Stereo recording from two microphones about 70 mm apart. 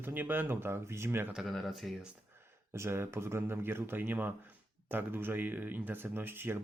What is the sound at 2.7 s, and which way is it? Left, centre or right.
Speech, right.